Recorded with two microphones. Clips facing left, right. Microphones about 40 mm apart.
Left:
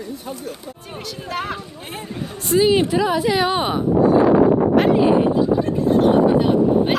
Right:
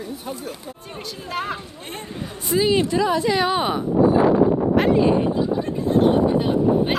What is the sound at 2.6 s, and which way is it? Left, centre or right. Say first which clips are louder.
A woman's voice: left 2 dB; centre.